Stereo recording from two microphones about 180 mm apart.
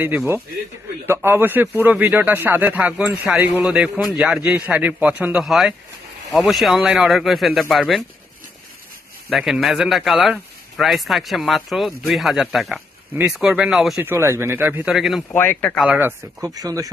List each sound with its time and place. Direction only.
0.0 s a man's voice: 10° right (ahead or behind)
9.3 s speech: centre (ahead or behind)
14.0 s a man's voice: 15° right (ahead or behind)
15.3 s speech: 10° left (ahead or behind)
15.8 s speech: 10° right (ahead or behind)